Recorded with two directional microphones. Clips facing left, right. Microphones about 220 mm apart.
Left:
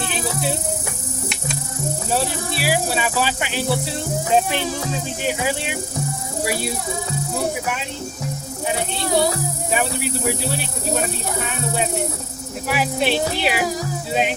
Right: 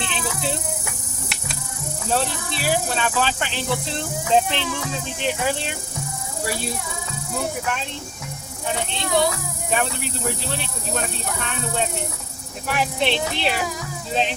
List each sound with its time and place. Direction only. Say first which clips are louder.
2.6 s speech: left 1 dB; 10° left (ahead or behind)
4.5 s speech: left 3 dB; 45° left (ahead or behind)
5.2 s speech: even; 10° left (ahead or behind)
8.9 s speech: left 1 dB; 35° left (ahead or behind)
9.7 s speech: left 2 dB; 10° left (ahead or behind)
11.4 s speech: even; 10° left (ahead or behind)